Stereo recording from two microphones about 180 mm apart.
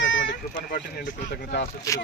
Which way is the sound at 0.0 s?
90° left.